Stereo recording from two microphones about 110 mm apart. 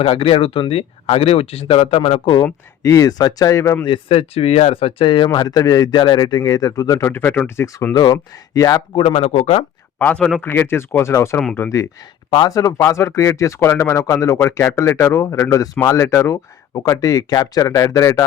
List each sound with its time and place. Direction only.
0.0 s speech: 60° left (ahead or behind)
2.4 s speech: 30° left (ahead or behind)
3.8 s speech: 55° left (ahead or behind); by 7.9 s 25° left (ahead or behind)
7.9 s speech: 35° left (ahead or behind)
9.0 s speech: 70° left (ahead or behind)
10.0 s speech: 10° left (ahead or behind)
10.4 s speech: 20° left (ahead or behind)
12.3 s speech: 35° left (ahead or behind)